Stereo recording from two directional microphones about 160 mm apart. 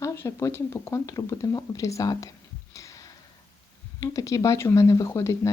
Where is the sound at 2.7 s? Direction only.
20° left (ahead or behind).